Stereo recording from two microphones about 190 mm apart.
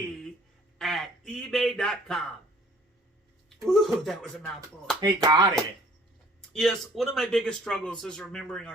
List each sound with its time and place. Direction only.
0.8 s a sound: centre (ahead or behind)
3.7 s speech: centre (ahead or behind)
4.9 s speech: 20° right (ahead or behind)
6.5 s speech: centre (ahead or behind)